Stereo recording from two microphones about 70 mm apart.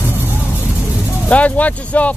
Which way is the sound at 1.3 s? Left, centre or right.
Left.